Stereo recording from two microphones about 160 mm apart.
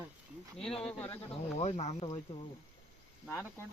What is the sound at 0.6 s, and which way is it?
Speech, 5° left (ahead or behind).